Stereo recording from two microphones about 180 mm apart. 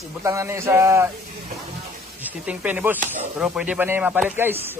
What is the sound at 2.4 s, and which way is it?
Speech, 10° right (ahead or behind).